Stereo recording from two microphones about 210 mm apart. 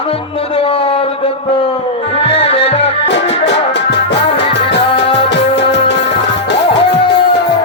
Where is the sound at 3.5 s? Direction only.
55° left (ahead or behind).